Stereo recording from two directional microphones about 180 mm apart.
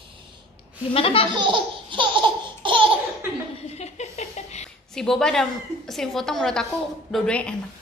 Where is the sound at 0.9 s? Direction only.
30° left (ahead or behind).